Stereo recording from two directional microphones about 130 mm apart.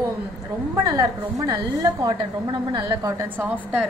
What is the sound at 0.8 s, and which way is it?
A woman's voice, 25° right (ahead or behind).